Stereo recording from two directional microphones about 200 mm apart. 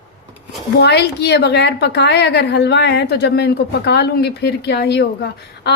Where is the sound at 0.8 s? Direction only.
55° left (ahead or behind).